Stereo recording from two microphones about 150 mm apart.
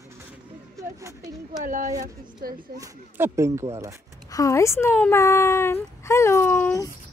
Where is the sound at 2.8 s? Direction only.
20° right (ahead or behind).